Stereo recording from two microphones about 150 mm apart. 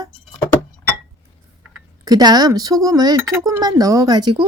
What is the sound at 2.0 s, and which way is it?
A woman's voice, 25° right (ahead or behind).